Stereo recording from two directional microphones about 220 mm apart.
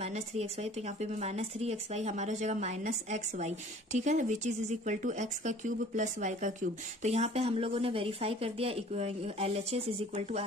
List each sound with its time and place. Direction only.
0.0 s a woman's voice: 30° right (ahead or behind)